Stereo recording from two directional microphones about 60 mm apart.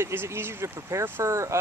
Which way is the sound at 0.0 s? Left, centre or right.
Right.